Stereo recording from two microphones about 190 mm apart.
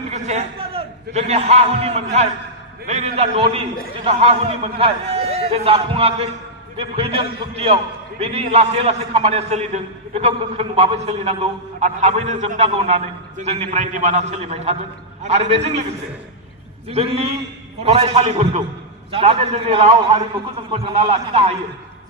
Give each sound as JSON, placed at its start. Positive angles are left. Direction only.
{"t": 0.1, "sound": "a man's voice", "side_deg": -35}
{"t": 16.9, "sound": "a man's voice", "side_deg": -30}